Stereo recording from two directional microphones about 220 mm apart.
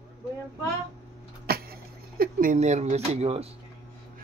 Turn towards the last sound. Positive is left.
turn(degrees=-25)  # may be behind; listen again after turning